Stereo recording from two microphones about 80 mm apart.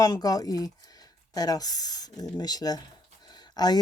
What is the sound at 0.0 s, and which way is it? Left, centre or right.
A woman's voice, left.